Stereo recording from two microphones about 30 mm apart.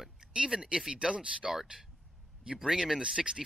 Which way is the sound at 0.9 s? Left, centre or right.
Right.